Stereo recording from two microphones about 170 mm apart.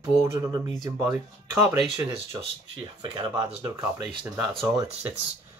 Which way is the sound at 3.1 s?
25° right (ahead or behind).